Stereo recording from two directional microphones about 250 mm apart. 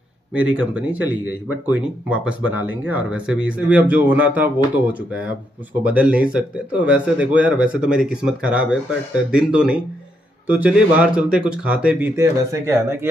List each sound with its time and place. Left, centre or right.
0.3 s speech: centre